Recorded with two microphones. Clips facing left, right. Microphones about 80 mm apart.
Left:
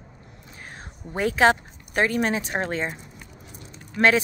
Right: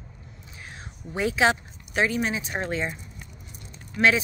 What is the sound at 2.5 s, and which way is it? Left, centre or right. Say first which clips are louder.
Speech: left 2 dB; left.